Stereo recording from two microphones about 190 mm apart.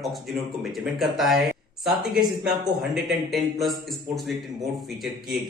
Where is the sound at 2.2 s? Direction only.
20° right (ahead or behind).